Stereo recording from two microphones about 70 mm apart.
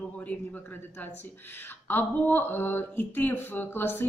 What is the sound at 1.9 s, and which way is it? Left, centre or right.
Speech, left.